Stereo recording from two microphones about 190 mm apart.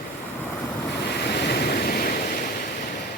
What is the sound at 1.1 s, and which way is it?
Waves, 60° left (ahead or behind).